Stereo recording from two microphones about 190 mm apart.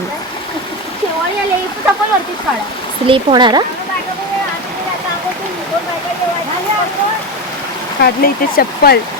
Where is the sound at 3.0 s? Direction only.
25° right (ahead or behind).